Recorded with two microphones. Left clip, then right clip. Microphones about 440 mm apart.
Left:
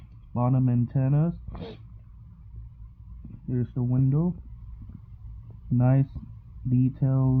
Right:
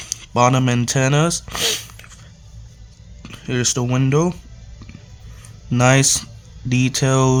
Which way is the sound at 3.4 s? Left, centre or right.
Centre.